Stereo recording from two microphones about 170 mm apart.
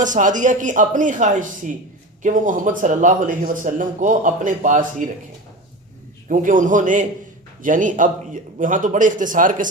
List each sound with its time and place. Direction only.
0.0 s speech: 50° right (ahead or behind)
6.2 s speech: 50° right (ahead or behind)